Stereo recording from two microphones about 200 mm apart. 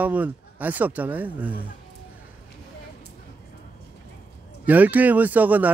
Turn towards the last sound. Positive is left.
turn(degrees=-10)  # may be behind; listen again after turning